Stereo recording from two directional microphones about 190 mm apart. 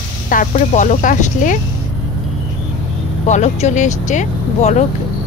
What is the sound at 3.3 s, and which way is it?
Speech, 35° left (ahead or behind).